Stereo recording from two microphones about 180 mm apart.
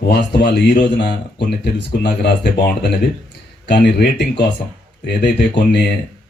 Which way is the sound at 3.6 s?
70° left (ahead or behind).